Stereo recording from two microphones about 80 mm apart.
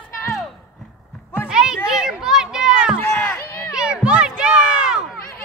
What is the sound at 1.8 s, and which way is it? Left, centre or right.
Children playing, centre.